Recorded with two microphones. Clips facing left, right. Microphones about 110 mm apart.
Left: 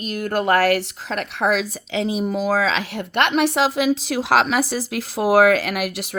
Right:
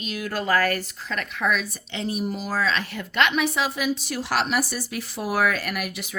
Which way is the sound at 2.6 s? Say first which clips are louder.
Left 4 dB; 90° left.